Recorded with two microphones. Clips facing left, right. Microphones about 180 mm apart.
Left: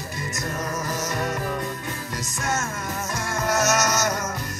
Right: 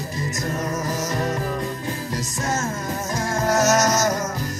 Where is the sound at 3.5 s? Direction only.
35° right (ahead or behind).